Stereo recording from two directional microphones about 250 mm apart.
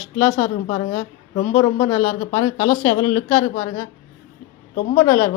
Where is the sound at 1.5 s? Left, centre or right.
Centre.